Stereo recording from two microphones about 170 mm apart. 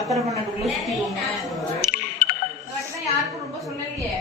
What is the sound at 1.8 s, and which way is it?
Music, 65° left (ahead or behind).